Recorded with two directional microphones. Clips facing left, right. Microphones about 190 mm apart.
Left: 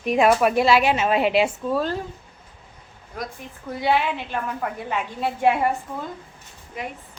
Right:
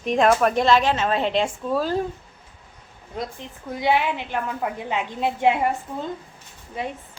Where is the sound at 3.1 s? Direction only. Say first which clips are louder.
Right 2 dB; 20° right (ahead or behind).